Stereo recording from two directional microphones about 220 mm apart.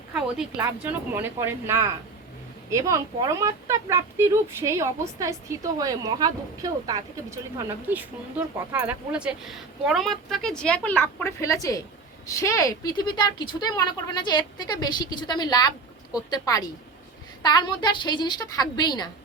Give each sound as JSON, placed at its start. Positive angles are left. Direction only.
{"t": 0.1, "sound": "a woman's voice", "side_deg": -5}